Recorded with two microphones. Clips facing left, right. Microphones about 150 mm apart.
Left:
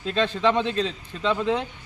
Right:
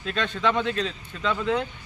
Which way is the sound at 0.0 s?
30° left (ahead or behind).